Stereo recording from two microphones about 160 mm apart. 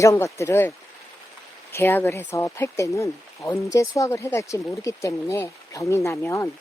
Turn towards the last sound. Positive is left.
turn(degrees=15)  # may be behind; listen again after turning